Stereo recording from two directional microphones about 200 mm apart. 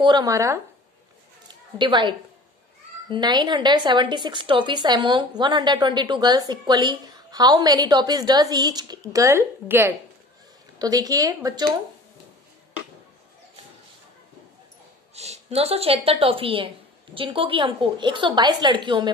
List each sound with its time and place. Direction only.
0.0 s speech: 20° right (ahead or behind)
1.8 s a woman's voice: 25° right (ahead or behind)
15.1 s a woman's voice: 35° right (ahead or behind)